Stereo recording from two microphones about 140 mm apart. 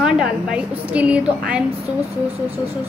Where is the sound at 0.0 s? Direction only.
5° right (ahead or behind).